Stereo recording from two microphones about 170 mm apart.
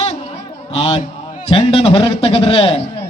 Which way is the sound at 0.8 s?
35° left (ahead or behind).